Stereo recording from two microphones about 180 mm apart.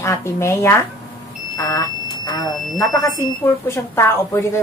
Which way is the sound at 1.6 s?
20° left (ahead or behind).